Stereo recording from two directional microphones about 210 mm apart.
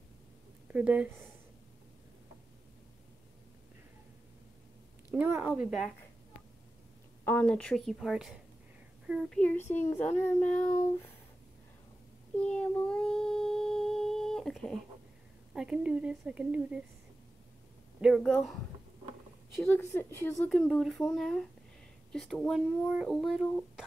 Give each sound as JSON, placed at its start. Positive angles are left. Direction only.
{"t": 0.7, "sound": "speech", "side_deg": -5}
{"t": 5.1, "sound": "speech", "side_deg": -10}
{"t": 7.2, "sound": "a child's voice", "side_deg": 5}
{"t": 12.4, "sound": "child singing", "side_deg": 5}
{"t": 15.5, "sound": "speech", "side_deg": -5}
{"t": 18.0, "sound": "speech", "side_deg": 0}
{"t": 19.6, "sound": "a child's voice", "side_deg": 10}